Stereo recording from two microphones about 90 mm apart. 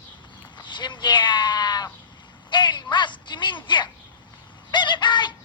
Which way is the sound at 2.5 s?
60° left (ahead or behind).